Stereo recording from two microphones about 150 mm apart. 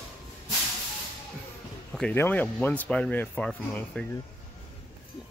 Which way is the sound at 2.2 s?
10° left (ahead or behind).